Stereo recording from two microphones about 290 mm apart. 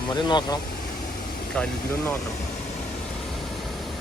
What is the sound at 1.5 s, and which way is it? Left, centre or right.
Speech, centre.